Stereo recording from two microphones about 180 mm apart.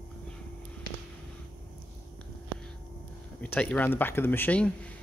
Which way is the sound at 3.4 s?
10° left (ahead or behind).